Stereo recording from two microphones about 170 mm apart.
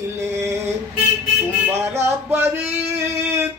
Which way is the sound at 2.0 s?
15° right (ahead or behind).